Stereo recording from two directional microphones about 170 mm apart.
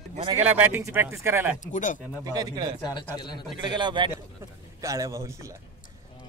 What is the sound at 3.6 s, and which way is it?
Speech, 25° right (ahead or behind).